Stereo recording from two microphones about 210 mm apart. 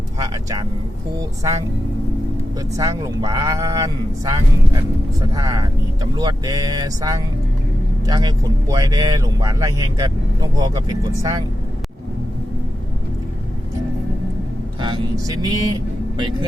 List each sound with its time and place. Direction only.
2.7 s speech: 15° right (ahead or behind)
14.8 s speech: 20° right (ahead or behind)